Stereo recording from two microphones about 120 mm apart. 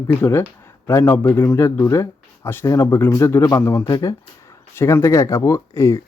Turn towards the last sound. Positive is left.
turn(degrees=25)  # may be behind; listen again after turning